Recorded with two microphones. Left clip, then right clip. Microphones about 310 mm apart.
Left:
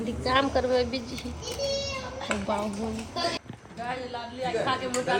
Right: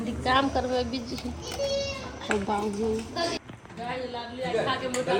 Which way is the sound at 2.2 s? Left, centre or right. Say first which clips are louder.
Right 2 dB; centre.